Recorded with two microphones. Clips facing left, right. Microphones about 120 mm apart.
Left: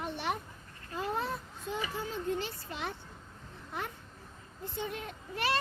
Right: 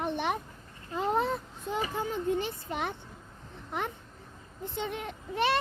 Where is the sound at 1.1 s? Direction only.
60° right (ahead or behind).